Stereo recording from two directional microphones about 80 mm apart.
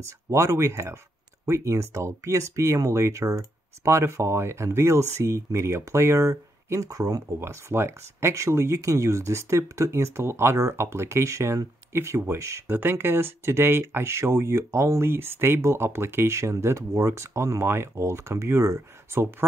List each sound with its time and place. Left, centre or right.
0.0 s speech: right
7.3 s speech: right
12.6 s speech: right